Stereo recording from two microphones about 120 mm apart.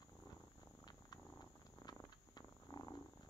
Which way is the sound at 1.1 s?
35° left (ahead or behind).